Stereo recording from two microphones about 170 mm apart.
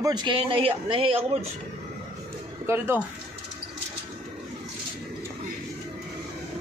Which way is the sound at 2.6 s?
15° right (ahead or behind).